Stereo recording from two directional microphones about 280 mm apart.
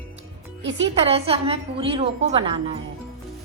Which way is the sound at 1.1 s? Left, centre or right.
Centre.